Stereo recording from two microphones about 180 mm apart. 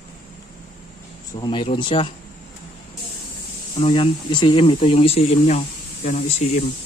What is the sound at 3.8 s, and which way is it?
Speech, 30° left (ahead or behind).